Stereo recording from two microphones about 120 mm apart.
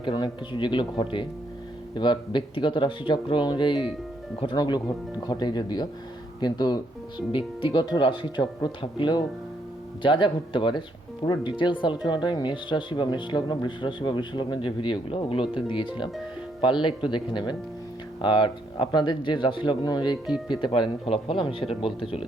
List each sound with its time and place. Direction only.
0.0 s speech: 40° left (ahead or behind)